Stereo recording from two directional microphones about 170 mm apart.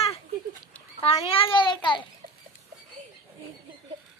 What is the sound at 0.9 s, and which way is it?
A child's voice, 35° left (ahead or behind).